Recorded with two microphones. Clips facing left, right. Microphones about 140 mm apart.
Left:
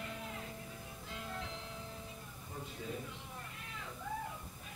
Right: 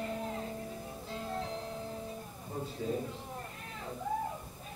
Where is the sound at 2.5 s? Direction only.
35° right (ahead or behind).